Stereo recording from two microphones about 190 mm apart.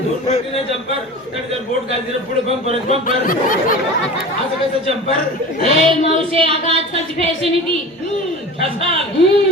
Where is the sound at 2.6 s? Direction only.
30° right (ahead or behind).